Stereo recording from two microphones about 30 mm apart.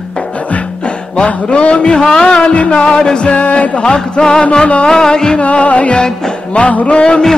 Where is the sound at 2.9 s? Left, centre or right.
Left.